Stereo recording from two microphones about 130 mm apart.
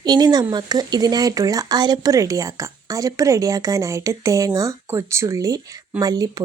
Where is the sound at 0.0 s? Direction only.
35° right (ahead or behind).